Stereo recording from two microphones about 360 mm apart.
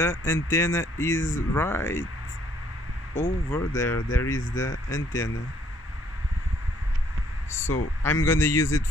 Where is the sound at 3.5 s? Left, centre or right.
Centre.